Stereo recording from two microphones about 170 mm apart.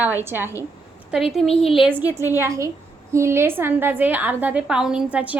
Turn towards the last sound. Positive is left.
turn(degrees=-5)  # may be behind; listen again after turning